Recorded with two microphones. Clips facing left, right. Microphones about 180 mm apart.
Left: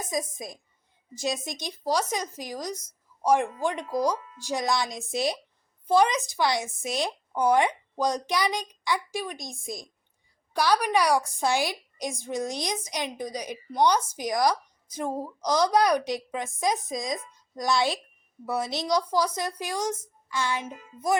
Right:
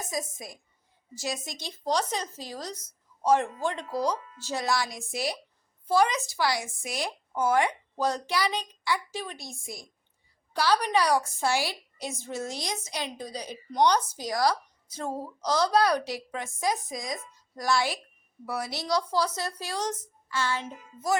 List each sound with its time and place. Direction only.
0.1 s a woman's voice: 20° left (ahead or behind)